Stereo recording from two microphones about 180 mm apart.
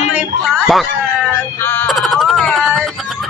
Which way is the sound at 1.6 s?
10° left (ahead or behind).